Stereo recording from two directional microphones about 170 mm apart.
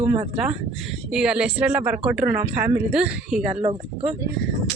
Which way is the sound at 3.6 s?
35° right (ahead or behind).